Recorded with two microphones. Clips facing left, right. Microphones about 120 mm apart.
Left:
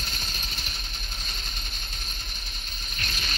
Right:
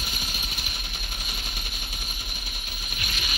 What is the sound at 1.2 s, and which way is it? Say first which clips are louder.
Music: right 3 dB; 10° right (ahead or behind).